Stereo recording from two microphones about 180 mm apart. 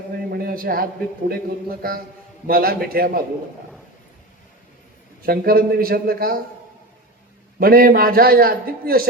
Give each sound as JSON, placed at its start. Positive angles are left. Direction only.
{"t": 0.3, "sound": "a sound", "side_deg": -55}
{"t": 1.8, "sound": "a man's voice", "side_deg": -55}
{"t": 5.2, "sound": "a man's voice", "side_deg": -55}
{"t": 7.6, "sound": "a man's voice", "side_deg": -55}